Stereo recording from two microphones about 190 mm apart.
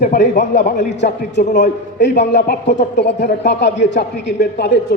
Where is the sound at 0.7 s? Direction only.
65° left (ahead or behind).